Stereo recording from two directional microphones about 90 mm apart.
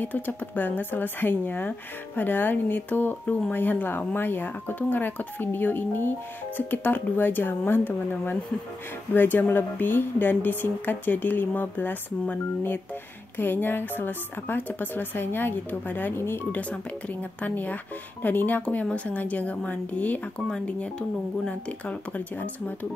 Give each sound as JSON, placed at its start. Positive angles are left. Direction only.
{"t": 0.0, "sound": "a woman's voice", "side_deg": 20}